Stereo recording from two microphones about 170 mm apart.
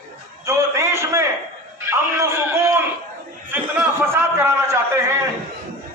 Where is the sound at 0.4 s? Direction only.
15° right (ahead or behind).